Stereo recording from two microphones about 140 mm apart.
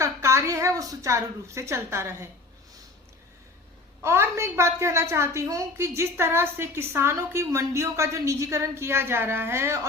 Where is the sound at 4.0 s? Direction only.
20° right (ahead or behind).